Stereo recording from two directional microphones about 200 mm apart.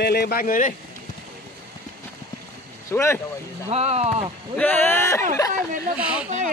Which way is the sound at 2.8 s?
15° left (ahead or behind).